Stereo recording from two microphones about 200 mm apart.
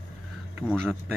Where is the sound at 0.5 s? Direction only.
5° right (ahead or behind).